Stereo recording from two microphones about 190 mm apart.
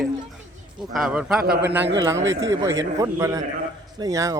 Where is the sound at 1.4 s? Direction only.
55° right (ahead or behind).